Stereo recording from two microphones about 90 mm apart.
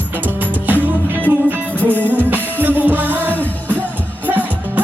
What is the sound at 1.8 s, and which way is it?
Music, 20° left (ahead or behind).